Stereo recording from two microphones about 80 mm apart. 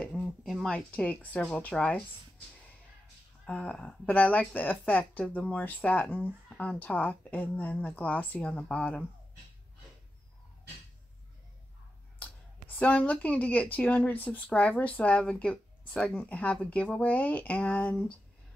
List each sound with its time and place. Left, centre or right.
0.0 s a sound: centre
0.7 s speech: centre
3.4 s speech: centre
8.5 s speech: centre
12.2 s speech: centre